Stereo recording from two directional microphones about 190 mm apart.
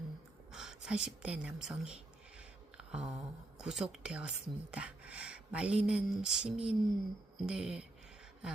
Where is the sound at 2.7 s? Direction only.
5° right (ahead or behind).